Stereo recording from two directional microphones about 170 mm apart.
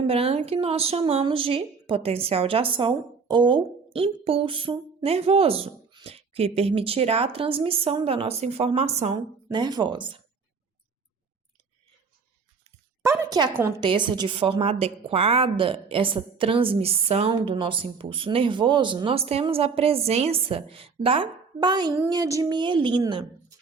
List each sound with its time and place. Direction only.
0.1 s a woman's voice: 35° right (ahead or behind)
9.1 s a woman's voice: 25° right (ahead or behind)
13.0 s a woman's voice: 15° right (ahead or behind)
13.8 s a woman's voice: 25° right (ahead or behind)